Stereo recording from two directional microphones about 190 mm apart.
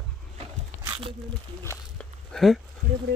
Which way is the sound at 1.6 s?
15° left (ahead or behind).